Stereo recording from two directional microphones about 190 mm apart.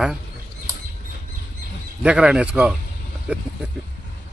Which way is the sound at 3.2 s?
5° right (ahead or behind).